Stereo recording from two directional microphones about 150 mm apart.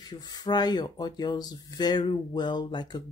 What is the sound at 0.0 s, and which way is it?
Speech, 25° left (ahead or behind).